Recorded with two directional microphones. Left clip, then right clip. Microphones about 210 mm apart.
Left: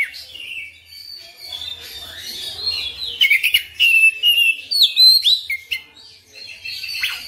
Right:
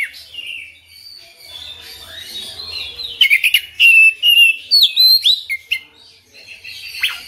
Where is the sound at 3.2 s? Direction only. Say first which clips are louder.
Right 3 dB; 15° right (ahead or behind).